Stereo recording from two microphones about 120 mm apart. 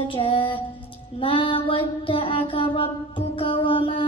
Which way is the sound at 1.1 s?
45° left (ahead or behind).